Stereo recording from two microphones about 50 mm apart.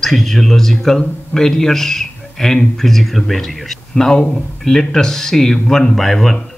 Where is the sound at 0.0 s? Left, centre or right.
Centre.